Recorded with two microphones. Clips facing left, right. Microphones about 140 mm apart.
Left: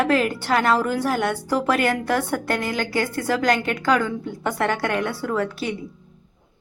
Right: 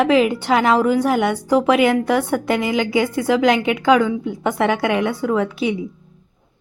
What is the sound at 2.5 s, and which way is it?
Speech, 10° right (ahead or behind).